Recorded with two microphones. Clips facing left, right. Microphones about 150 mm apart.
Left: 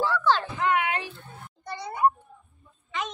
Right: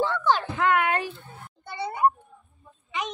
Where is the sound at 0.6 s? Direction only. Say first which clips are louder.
Right 3 dB; 55° right (ahead or behind).